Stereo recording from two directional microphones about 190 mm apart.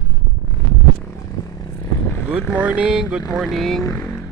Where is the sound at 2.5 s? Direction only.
5° right (ahead or behind).